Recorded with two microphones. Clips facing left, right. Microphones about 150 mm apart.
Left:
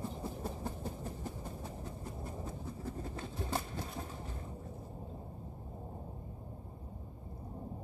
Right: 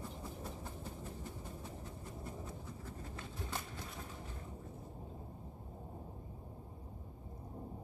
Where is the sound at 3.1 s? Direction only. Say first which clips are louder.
Left 6 dB; 35° left (ahead or behind).